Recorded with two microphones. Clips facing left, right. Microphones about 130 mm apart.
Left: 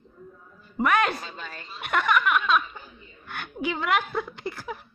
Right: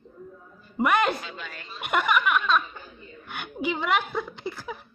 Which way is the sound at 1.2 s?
35° left (ahead or behind).